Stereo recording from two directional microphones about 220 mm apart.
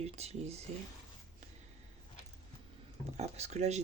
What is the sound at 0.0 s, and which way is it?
Speech, 30° right (ahead or behind).